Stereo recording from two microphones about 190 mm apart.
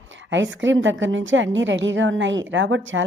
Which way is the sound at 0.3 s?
75° right (ahead or behind).